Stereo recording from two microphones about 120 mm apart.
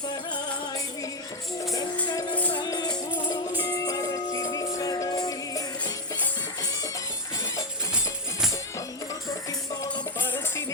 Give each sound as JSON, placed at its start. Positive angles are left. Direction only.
{"t": 2.0, "sound": "music", "side_deg": 40}
{"t": 2.3, "sound": "music", "side_deg": 10}
{"t": 2.6, "sound": "music", "side_deg": 35}
{"t": 10.2, "sound": "music", "side_deg": 15}